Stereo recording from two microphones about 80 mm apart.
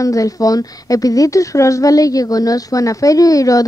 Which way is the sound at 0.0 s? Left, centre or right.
Left.